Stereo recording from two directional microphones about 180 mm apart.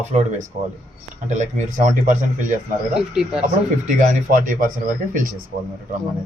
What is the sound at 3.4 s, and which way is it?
Speech, 45° right (ahead or behind).